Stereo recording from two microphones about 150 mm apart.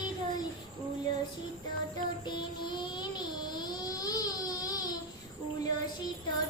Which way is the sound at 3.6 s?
25° left (ahead or behind).